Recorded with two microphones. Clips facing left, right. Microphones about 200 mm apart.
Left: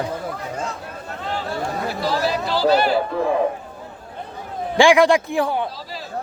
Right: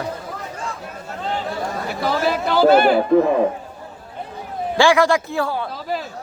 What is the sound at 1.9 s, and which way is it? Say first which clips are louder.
Chatter: right 3 dB; 55° right (ahead or behind).